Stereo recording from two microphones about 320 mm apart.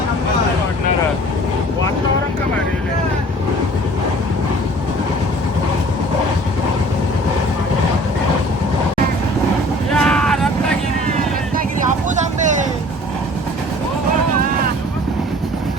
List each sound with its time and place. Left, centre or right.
9.9 s vehicle: centre
12.0 s vehicle: right